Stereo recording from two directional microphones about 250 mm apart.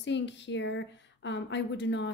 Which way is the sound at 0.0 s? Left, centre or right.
Left.